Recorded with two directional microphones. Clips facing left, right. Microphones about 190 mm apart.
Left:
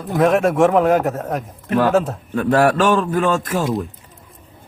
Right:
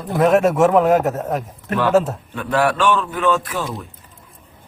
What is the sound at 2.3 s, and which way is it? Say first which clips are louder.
A man's voice: left 4 dB; 45° left (ahead or behind).